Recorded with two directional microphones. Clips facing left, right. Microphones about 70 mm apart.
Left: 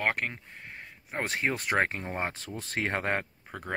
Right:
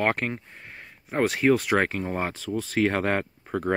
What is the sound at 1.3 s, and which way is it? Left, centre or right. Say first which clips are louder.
Speech: right 9 dB; centre.